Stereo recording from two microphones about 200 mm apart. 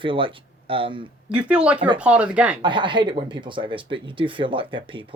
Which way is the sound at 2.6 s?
25° right (ahead or behind).